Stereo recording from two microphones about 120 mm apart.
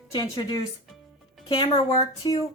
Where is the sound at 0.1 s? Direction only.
30° left (ahead or behind).